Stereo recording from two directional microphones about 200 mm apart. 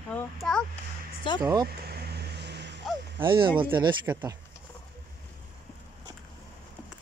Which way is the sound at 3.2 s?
25° right (ahead or behind).